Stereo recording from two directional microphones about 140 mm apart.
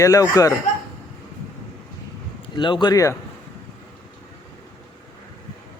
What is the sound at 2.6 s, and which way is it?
Speech, 35° left (ahead or behind).